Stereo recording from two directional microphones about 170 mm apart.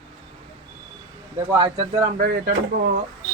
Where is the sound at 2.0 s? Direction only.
55° right (ahead or behind).